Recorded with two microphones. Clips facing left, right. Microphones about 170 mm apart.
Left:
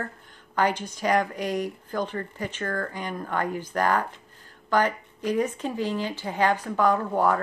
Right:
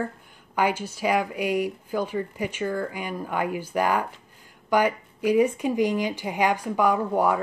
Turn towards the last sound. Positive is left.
turn(degrees=-10)  # may be behind; listen again after turning